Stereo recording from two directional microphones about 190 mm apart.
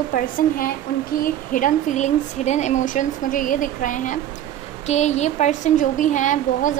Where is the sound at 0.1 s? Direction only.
45° left (ahead or behind).